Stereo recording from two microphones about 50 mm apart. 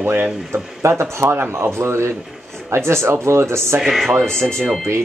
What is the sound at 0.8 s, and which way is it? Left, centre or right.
Speech, right.